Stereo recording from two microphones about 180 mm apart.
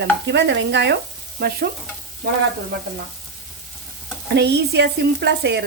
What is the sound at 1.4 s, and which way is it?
Stir, 60° right (ahead or behind).